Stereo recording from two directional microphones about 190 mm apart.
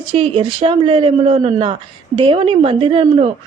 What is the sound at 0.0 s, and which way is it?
A woman's voice, 25° right (ahead or behind).